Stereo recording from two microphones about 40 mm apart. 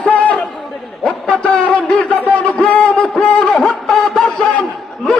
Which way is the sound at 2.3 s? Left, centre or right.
Left.